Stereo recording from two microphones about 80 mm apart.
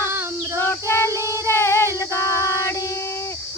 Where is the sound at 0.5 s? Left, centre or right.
Left.